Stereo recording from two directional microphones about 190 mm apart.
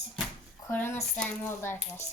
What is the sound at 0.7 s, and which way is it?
Speech, 10° left (ahead or behind).